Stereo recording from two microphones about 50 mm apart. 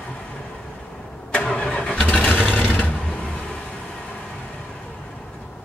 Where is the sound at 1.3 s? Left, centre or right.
Left.